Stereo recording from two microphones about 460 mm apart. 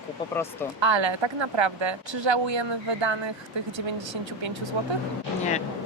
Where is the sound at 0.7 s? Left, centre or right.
Right.